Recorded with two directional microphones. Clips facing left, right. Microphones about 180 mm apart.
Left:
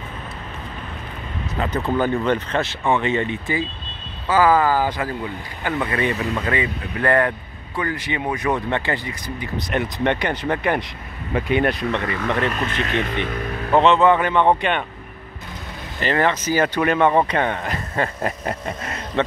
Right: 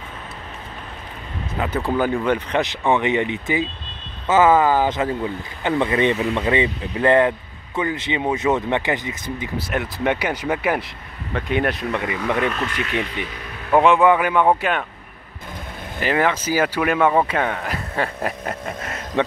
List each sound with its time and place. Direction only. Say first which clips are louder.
1.6 s speech: even; 10° right (ahead or behind)
9.6 s speech: left 4 dB; 5° right (ahead or behind)
12.0 s speech: right 1 dB; 10° right (ahead or behind)
13.1 s speech: left 5 dB; 55° left (ahead or behind)
13.7 s speech: even; 10° right (ahead or behind)
16.0 s speech: even; 10° right (ahead or behind)